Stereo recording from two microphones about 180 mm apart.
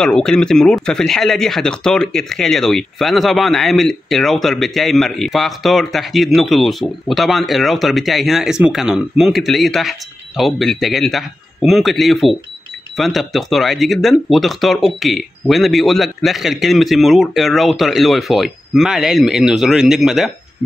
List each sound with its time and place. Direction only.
0.0 s speech: 5° left (ahead or behind)